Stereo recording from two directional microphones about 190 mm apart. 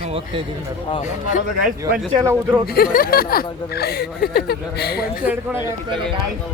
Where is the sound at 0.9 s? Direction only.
40° left (ahead or behind).